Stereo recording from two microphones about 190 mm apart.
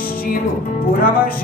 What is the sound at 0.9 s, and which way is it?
Music, 50° left (ahead or behind).